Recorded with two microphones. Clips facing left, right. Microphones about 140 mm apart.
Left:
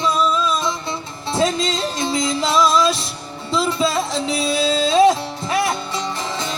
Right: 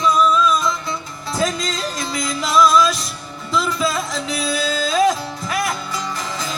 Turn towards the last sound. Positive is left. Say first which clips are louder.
# left 2 dB
turn(degrees=25)  # may be behind; listen again after turning